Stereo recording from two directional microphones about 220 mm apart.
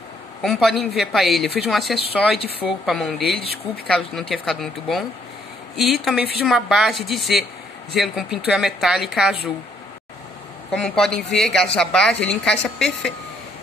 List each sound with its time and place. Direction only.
0.4 s a woman's voice: centre (ahead or behind)
3.3 s speech: 45° right (ahead or behind)
4.1 s a woman's voice: centre (ahead or behind)
10.7 s a woman's voice: 5° left (ahead or behind)